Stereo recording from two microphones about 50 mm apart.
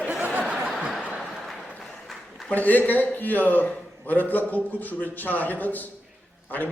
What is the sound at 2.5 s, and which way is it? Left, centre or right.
A man's voice, left.